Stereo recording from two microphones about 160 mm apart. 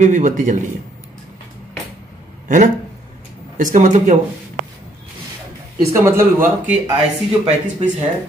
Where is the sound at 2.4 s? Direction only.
50° right (ahead or behind).